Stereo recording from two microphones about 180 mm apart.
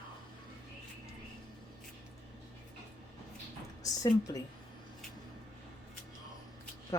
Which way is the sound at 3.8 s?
20° left (ahead or behind).